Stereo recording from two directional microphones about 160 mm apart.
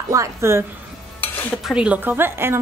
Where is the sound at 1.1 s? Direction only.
Centre (ahead or behind); by 2.5 s 15° right (ahead or behind).